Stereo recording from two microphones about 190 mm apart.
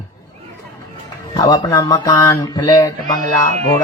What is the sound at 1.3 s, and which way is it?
Speech, 20° left (ahead or behind).